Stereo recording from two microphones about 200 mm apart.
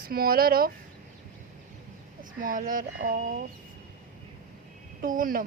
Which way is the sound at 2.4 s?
45° right (ahead or behind).